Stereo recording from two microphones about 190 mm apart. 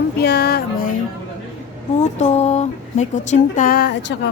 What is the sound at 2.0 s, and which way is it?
Speech, 35° left (ahead or behind).